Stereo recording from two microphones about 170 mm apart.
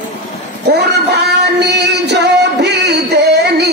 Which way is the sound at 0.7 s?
75° right (ahead or behind).